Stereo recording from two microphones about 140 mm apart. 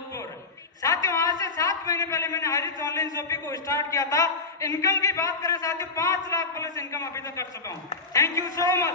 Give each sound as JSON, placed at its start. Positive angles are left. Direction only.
{"t": 0.8, "sound": "a man's voice", "side_deg": 25}